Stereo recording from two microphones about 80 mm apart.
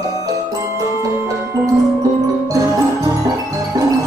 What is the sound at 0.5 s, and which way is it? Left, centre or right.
Music, right.